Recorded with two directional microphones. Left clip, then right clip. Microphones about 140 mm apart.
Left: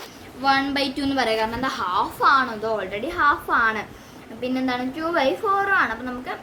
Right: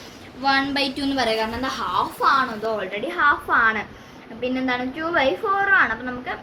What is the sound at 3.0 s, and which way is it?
A woman's voice, 40° left (ahead or behind).